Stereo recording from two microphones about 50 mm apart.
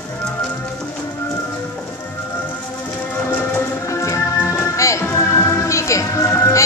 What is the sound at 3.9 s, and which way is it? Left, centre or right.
Music, left.